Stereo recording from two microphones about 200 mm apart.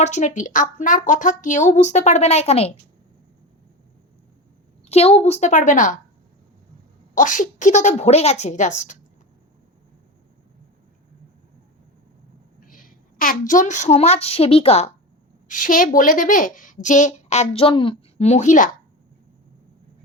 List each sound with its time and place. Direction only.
0.0 s speech: 35° left (ahead or behind)
4.9 s speech: 30° left (ahead or behind)
7.2 s speech: 40° left (ahead or behind)
12.6 s a woman's voice: 45° left (ahead or behind)
15.4 s speech: 40° left (ahead or behind)